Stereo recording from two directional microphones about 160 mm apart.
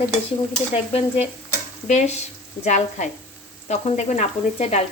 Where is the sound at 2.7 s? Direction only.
45° left (ahead or behind).